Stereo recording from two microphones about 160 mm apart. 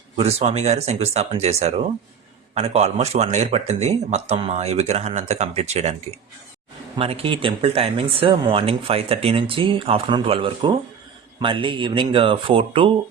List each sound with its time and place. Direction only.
0.2 s speech: 40° right (ahead or behind)
6.9 s speech: 35° right (ahead or behind)